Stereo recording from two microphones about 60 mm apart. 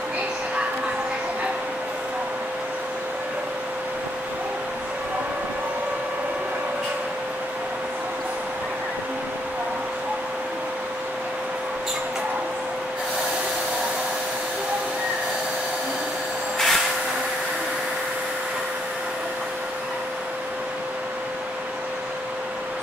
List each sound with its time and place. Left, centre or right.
16.5 s vehicle: centre